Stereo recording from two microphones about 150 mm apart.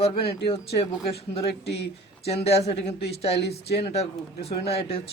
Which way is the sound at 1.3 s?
40° left (ahead or behind).